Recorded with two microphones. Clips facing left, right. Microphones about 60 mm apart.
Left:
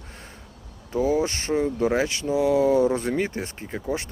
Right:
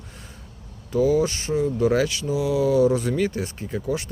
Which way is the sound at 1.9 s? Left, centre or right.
Left.